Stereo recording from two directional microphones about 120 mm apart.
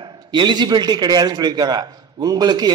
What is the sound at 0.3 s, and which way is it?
A man's voice, 40° right (ahead or behind).